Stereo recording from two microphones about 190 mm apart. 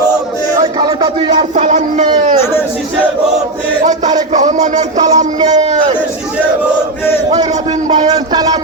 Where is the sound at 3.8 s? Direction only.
40° right (ahead or behind).